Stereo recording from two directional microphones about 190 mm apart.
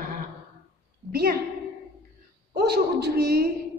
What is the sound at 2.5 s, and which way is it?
A woman's voice, 60° right (ahead or behind).